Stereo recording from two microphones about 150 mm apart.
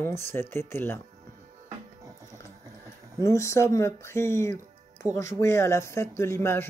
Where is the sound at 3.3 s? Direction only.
20° left (ahead or behind).